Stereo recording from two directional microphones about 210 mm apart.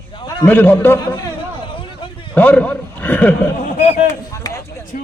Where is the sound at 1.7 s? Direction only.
25° left (ahead or behind).